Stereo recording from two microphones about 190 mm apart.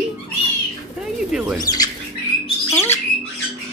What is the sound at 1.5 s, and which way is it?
Speech, 20° left (ahead or behind).